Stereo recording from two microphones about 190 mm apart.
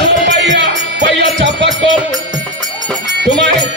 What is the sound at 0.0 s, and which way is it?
Music, 65° right (ahead or behind).